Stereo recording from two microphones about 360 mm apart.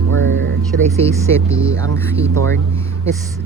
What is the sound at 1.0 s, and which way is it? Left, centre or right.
Speech, centre.